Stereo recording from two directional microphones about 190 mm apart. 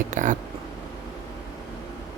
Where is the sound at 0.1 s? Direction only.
40° right (ahead or behind).